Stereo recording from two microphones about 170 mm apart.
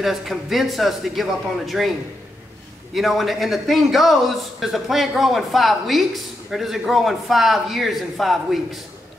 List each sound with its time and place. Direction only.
0.0 s a man's voice: centre (ahead or behind)
2.9 s a man's voice: centre (ahead or behind)